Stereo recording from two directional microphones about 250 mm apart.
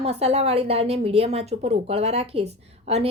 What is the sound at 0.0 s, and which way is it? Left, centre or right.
A woman's voice, right.